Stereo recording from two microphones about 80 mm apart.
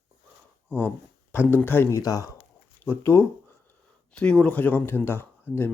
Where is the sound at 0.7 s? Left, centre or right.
Left.